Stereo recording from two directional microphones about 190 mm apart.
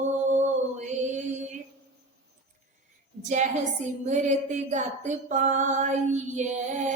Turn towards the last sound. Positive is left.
turn(degrees=-40)  # may be behind; listen again after turning